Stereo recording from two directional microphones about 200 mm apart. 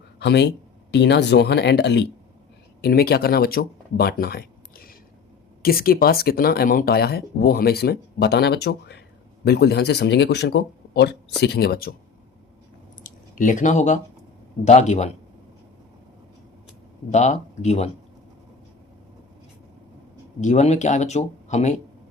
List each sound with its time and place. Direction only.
0.2 s speech: 60° left (ahead or behind)
13.0 s a sound: 40° left (ahead or behind)
14.6 s speech: 35° left (ahead or behind)
17.1 s speech: 35° left (ahead or behind)
20.4 s speech: 35° left (ahead or behind)